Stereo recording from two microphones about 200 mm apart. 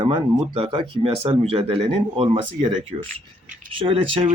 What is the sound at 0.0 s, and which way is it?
Speech, 25° right (ahead or behind).